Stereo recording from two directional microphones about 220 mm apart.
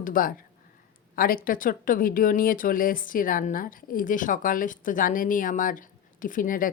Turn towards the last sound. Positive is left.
turn(degrees=40)  # may be behind; listen again after turning